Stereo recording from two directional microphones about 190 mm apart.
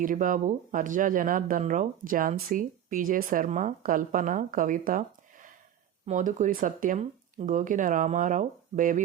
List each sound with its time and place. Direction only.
0.0 s speech: 45° right (ahead or behind)